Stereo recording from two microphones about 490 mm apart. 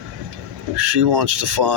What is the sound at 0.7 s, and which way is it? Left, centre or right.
Speech, right.